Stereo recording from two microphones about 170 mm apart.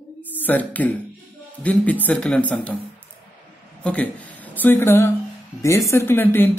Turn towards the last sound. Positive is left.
turn(degrees=10)  # may be behind; listen again after turning